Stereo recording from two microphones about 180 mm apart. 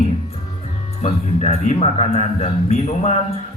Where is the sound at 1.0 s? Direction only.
40° left (ahead or behind).